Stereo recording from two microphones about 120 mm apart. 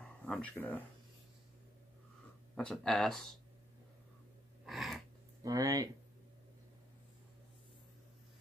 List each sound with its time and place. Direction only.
0.2 s speech: 10° left (ahead or behind)
2.5 s speech: 5° left (ahead or behind)
4.6 s a sound: centre (ahead or behind)
5.4 s speech: 30° right (ahead or behind)